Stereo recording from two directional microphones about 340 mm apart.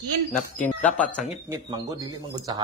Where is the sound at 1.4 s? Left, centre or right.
Centre.